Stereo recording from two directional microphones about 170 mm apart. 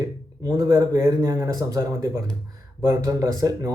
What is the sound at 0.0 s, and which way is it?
A man's voice, 20° right (ahead or behind).